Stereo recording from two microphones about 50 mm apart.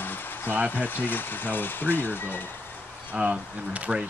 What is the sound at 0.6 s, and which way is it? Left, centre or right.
Speech, left.